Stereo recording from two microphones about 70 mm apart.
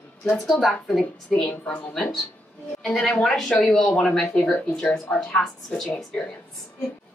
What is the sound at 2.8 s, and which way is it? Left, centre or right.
Speech, centre.